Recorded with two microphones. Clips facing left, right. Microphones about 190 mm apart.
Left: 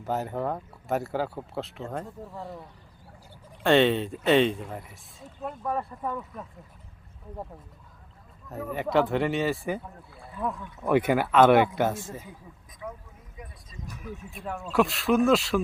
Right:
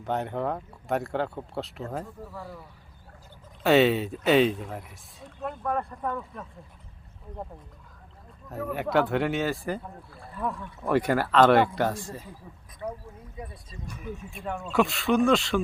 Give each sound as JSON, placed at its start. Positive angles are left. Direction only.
{"t": 0.0, "sound": "speech", "side_deg": 5}
{"t": 3.6, "sound": "speech", "side_deg": -5}
{"t": 8.4, "sound": "speech", "side_deg": 0}
{"t": 13.4, "sound": "a sound", "side_deg": -30}
{"t": 13.8, "sound": "speech", "side_deg": 0}